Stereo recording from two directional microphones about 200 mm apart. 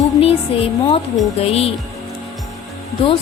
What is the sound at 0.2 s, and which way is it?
Speech, 30° left (ahead or behind).